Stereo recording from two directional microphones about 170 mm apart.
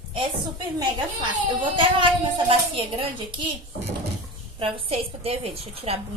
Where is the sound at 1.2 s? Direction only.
30° right (ahead or behind).